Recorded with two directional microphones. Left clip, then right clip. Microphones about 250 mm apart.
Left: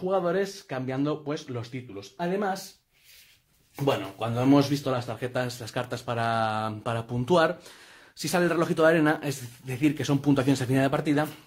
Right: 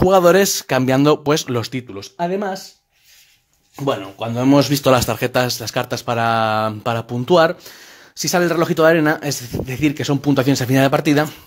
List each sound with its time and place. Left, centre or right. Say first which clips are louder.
0.1 s speech: right 12 dB; right
3.8 s speech: right 6 dB; right